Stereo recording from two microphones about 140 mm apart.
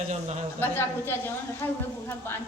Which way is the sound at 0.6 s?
15° left (ahead or behind).